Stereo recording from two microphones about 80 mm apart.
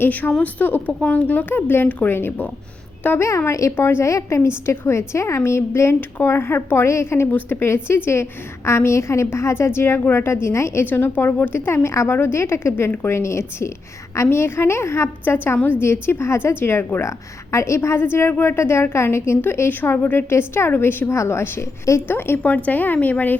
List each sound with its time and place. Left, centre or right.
0.0 s a woman's voice: left
3.2 s a woman's voice: left